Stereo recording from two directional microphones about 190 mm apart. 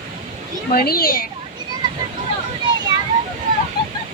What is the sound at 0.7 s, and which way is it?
Speech, 50° left (ahead or behind).